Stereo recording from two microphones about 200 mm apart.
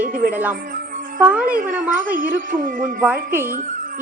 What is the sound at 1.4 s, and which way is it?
A woman's voice, 45° right (ahead or behind).